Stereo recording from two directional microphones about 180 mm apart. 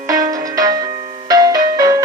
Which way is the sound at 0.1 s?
20° right (ahead or behind).